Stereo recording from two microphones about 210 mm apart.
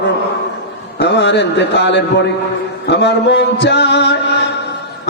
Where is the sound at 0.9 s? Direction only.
55° left (ahead or behind).